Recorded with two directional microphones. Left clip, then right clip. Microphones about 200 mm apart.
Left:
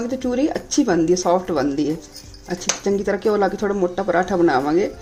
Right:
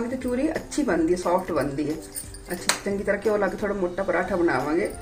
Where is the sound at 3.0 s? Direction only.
55° left (ahead or behind).